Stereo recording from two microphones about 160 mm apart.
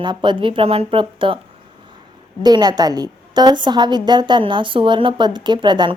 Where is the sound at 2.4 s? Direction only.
25° right (ahead or behind).